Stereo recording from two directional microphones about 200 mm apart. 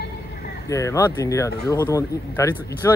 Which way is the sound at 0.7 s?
15° left (ahead or behind).